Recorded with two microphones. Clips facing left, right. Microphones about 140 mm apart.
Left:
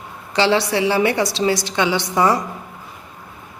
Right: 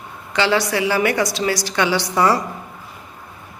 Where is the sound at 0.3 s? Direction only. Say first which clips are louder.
Left 1 dB; 30° left (ahead or behind).